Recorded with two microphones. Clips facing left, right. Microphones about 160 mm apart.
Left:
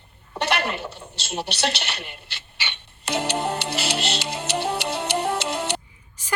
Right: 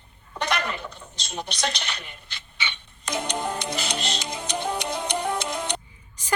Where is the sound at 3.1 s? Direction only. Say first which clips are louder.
Left 3 dB; 70° left (ahead or behind).